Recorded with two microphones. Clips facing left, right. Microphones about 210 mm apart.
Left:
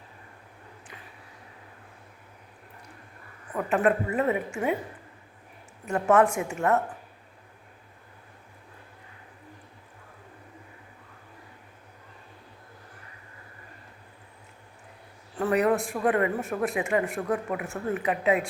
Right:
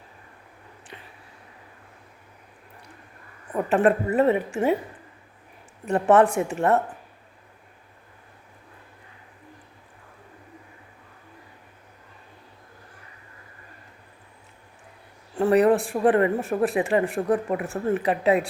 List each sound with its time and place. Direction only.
3.5 s a woman's voice: 30° right (ahead or behind)
5.9 s a woman's voice: 35° right (ahead or behind)
15.4 s a woman's voice: 30° right (ahead or behind)